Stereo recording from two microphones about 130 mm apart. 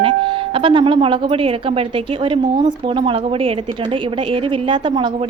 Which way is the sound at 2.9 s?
45° right (ahead or behind).